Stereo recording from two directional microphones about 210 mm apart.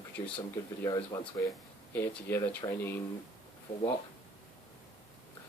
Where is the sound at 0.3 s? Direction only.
10° left (ahead or behind).